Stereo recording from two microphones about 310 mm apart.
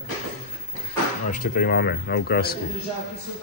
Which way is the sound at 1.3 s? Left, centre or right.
Left.